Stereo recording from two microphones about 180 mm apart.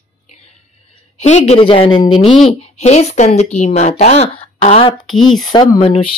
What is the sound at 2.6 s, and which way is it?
A woman's voice, 40° left (ahead or behind).